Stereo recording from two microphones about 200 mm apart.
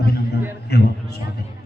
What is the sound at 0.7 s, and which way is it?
Speech, 55° left (ahead or behind).